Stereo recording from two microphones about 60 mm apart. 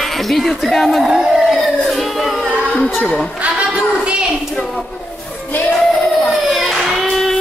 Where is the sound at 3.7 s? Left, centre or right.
Centre.